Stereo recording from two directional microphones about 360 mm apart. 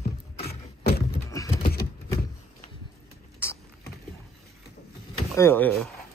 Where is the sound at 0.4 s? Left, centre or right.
Left.